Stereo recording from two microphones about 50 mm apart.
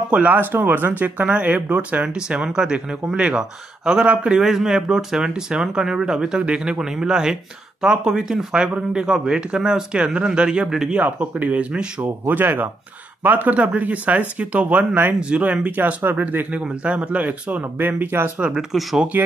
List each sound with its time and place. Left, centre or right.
0.1 s speech: right
2.1 s speech: centre
4.4 s speech: centre
11.0 s speech: right
12.0 s speech: right
18.4 s speech: centre
19.1 s speech: right